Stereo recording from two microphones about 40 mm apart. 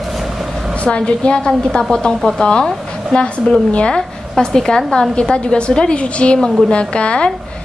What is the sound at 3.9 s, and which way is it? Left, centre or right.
A woman's voice, centre.